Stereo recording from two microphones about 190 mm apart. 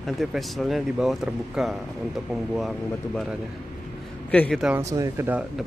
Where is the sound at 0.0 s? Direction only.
Centre (ahead or behind).